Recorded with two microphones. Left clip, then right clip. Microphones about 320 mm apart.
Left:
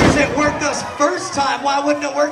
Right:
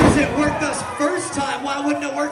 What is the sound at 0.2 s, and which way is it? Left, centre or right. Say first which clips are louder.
A man's voice: left 3 dB; centre.